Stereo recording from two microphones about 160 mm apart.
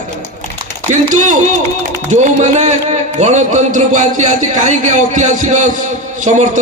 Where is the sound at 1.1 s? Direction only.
50° right (ahead or behind).